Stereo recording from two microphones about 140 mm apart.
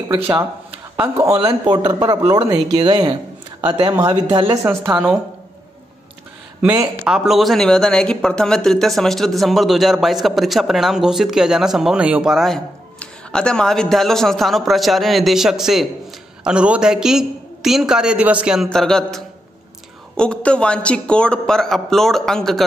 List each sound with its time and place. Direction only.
0.7 s a man's voice: 15° right (ahead or behind); by 4.6 s 30° right (ahead or behind)
6.6 s a man's voice: 25° right (ahead or behind)
7.1 s speech: 5° right (ahead or behind)